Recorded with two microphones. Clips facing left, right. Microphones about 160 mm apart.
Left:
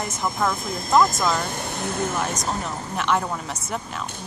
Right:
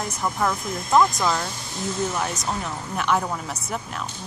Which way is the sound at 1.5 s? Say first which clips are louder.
Left 1 dB; 60° left (ahead or behind).